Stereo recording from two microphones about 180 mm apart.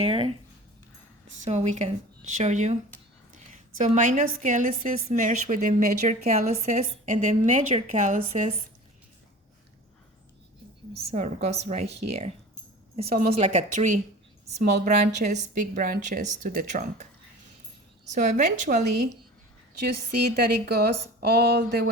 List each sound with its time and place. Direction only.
0.0 s speech: 30° right (ahead or behind)
1.5 s speech: 40° right (ahead or behind)
3.8 s a woman's voice: 40° right (ahead or behind)
7.7 s speech: 30° right (ahead or behind)
8.0 s speech: 40° right (ahead or behind)
10.9 s speech: 40° right (ahead or behind)
13.3 s a woman's voice: 40° right (ahead or behind)
18.1 s speech: 40° right (ahead or behind)
19.8 s speech: 60° right (ahead or behind)